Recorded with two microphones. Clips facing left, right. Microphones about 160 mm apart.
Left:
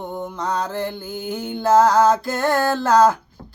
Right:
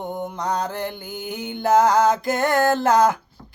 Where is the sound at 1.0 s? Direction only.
15° right (ahead or behind).